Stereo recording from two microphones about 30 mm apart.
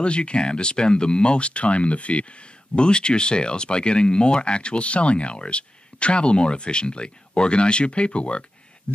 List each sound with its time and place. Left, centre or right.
0.0 s speech: left
2.7 s speech: left
8.9 s a sound: left